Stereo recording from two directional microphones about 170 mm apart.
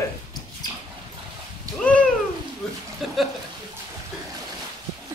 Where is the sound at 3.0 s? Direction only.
Centre (ahead or behind).